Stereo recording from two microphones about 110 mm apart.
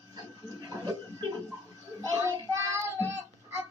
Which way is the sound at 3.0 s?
20° right (ahead or behind).